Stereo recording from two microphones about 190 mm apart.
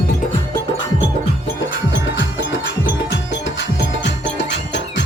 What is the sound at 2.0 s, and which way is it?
Music, 80° left.